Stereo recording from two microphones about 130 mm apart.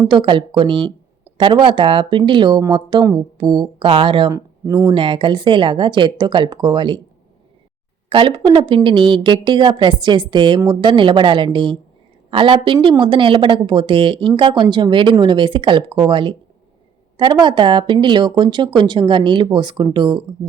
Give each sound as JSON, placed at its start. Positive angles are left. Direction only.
{"t": 0.1, "sound": "speech", "side_deg": -40}
{"t": 4.3, "sound": "speech", "side_deg": -25}
{"t": 4.9, "sound": "speech", "side_deg": -40}
{"t": 8.1, "sound": "speech", "side_deg": -40}